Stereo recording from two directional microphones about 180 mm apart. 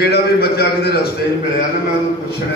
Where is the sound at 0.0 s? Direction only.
60° left (ahead or behind).